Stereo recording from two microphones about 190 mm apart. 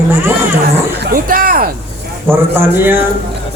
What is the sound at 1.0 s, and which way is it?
Speech, 50° right (ahead or behind).